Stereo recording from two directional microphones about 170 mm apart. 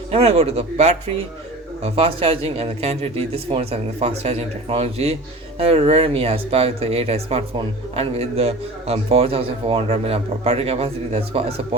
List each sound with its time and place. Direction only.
0.1 s a man's voice: 35° right (ahead or behind)